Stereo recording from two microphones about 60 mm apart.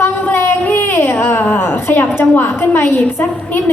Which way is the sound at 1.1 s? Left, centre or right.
Left.